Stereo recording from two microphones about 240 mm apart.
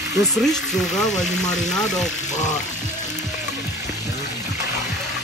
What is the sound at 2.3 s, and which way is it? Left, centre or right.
Frying, left.